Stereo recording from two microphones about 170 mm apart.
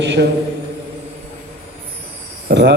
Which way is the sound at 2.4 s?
85° right.